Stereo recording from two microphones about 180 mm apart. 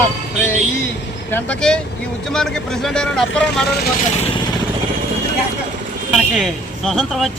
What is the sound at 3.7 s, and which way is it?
Speech, 60° left (ahead or behind).